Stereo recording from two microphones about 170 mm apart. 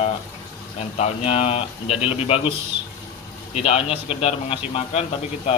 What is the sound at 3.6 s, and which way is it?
Speech, 35° left (ahead or behind).